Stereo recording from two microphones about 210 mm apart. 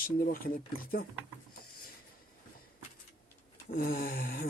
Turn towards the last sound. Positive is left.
turn(degrees=45)  # may be behind; listen again after turning